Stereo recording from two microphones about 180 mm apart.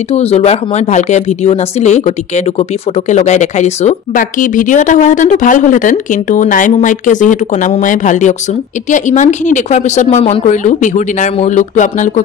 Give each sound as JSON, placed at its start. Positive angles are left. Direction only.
{"t": 0.1, "sound": "a woman's voice", "side_deg": 35}